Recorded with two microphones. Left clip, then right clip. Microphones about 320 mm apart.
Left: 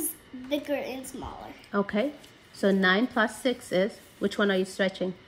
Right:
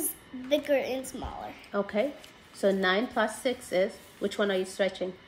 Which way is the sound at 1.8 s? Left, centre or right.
Left.